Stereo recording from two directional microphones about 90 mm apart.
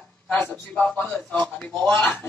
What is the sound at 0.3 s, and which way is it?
A man's voice, 20° left (ahead or behind).